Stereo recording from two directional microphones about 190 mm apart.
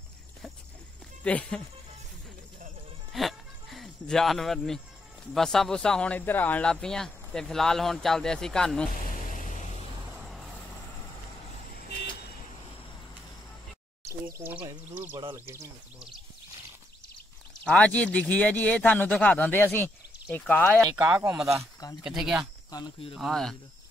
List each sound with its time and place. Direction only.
1.2 s speech: 5° left (ahead or behind)
3.1 s a sound: centre (ahead or behind)
5.3 s speech: centre (ahead or behind)
10.1 s vehicle: centre (ahead or behind)
14.0 s a sound: 10° right (ahead or behind)
14.9 s speech: 10° right (ahead or behind)
17.6 s speech: 5° left (ahead or behind)
20.9 s speech: 10° right (ahead or behind)
22.7 s speech: 20° left (ahead or behind)
23.1 s speech: centre (ahead or behind)